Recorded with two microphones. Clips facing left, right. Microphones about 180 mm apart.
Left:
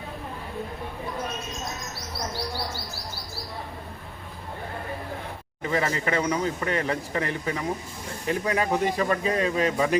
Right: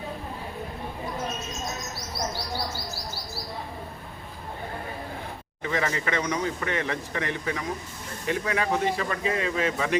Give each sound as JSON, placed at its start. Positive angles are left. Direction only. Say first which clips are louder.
{"t": 5.7, "sound": "speech", "louder": "left 2 dB", "side_deg": 30}